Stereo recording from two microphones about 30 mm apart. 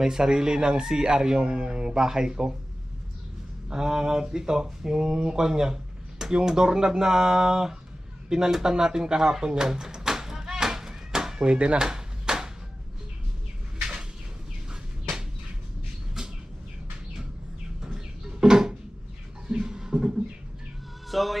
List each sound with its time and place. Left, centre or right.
0.0 s speech: centre
3.7 s speech: centre
8.7 s a sound: right
11.4 s speech: right
11.8 s a sound: right
16.2 s vehicle: right
17.8 s music: right
19.5 s beatboxing: right
21.1 s music: centre